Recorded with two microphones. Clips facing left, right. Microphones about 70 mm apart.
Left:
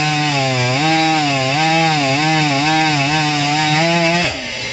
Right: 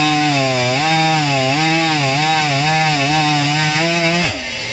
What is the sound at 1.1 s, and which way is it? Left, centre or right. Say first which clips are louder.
Chainsaw: even; centre.